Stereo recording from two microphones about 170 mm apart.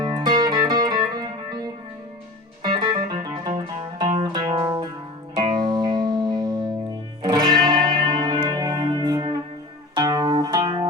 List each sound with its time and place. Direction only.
0.0 s music: 25° right (ahead or behind)